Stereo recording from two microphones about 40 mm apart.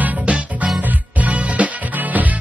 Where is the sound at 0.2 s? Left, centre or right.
Right.